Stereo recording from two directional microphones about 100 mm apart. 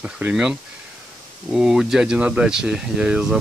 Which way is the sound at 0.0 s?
10° right (ahead or behind).